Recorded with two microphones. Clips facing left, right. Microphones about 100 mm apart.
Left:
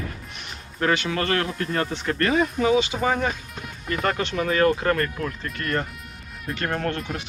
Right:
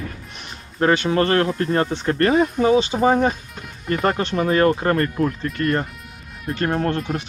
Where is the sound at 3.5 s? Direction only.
Centre (ahead or behind).